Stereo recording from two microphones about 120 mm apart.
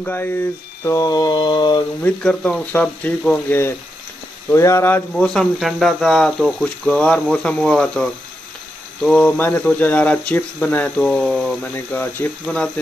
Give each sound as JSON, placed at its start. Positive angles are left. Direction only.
{"t": 0.0, "sound": "mantra", "side_deg": 15}
{"t": 2.0, "sound": "speech", "side_deg": 10}
{"t": 5.1, "sound": "speech", "side_deg": 5}
{"t": 11.6, "sound": "speech", "side_deg": 15}